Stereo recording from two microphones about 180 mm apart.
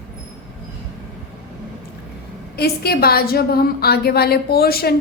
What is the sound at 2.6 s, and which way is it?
A woman's voice, 60° left (ahead or behind).